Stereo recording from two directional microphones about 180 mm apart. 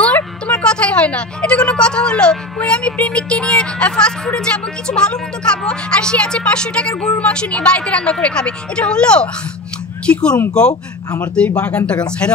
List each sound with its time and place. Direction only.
0.0 s a woman's voice: 5° left (ahead or behind)
10.7 s speech: 20° left (ahead or behind)
11.3 s a woman's voice: 5° left (ahead or behind)